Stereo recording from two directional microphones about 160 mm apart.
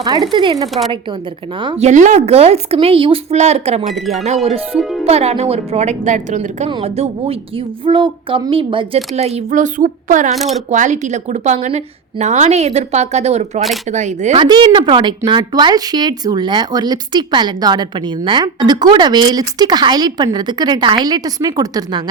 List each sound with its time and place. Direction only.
0.0 s speech: 25° right (ahead or behind)
1.6 s speech: 40° right (ahead or behind)
3.8 s speech: centre (ahead or behind)
4.4 s a woman's voice: 35° right (ahead or behind); by 10.3 s 55° right (ahead or behind)
10.3 s speech: centre (ahead or behind)
10.7 s a woman's voice: 50° right (ahead or behind)
14.3 s speech: 30° right (ahead or behind)